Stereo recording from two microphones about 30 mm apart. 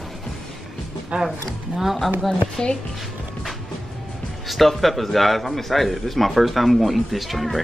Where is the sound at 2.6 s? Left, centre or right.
Left.